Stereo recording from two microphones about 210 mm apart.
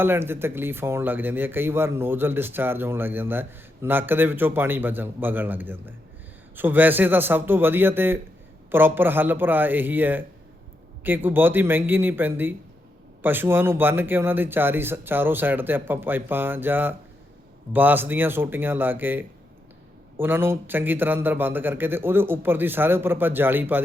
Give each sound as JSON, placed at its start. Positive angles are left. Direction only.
{"t": 0.0, "sound": "speech", "side_deg": -10}